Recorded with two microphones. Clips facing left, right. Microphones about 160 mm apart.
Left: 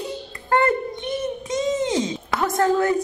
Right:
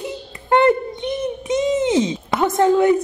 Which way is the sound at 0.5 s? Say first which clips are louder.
Right 5 dB; 20° right (ahead or behind).